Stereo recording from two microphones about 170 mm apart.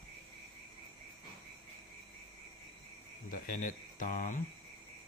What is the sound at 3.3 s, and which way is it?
Speech, 50° left (ahead or behind).